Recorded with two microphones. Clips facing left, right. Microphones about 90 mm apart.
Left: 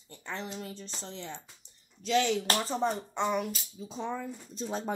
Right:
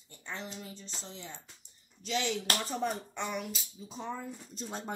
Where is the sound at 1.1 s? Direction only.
90° left.